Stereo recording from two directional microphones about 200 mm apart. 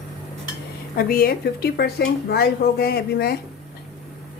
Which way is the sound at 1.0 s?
45° left (ahead or behind).